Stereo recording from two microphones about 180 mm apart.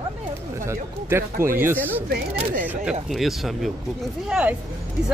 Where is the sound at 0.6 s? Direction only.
15° right (ahead or behind).